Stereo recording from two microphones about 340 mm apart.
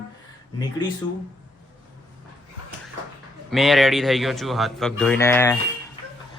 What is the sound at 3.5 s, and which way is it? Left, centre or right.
Speech, centre.